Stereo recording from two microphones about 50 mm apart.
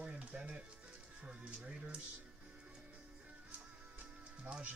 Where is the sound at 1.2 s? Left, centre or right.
Right.